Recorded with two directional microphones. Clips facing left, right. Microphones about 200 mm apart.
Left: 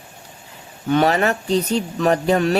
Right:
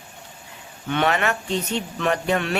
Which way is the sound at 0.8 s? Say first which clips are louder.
Left 5 dB; 40° left (ahead or behind).